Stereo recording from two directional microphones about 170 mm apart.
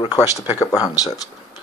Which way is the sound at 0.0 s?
25° left (ahead or behind).